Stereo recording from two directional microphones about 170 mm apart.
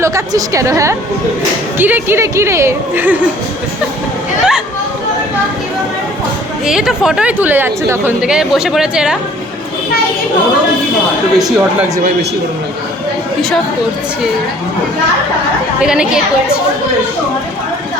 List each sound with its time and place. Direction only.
0.0 s a woman's voice: 20° right (ahead or behind)
6.7 s speech: 5° right (ahead or behind)
11.3 s speech: centre (ahead or behind)
15.8 s speech: 5° right (ahead or behind)